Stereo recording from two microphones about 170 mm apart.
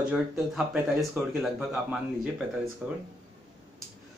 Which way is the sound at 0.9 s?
Centre (ahead or behind).